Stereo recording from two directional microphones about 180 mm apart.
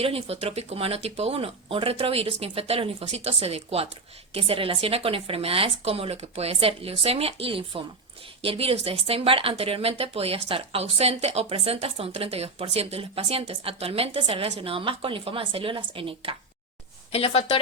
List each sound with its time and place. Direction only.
0.0 s speech: 35° right (ahead or behind)
17.1 s a woman's voice: 35° left (ahead or behind)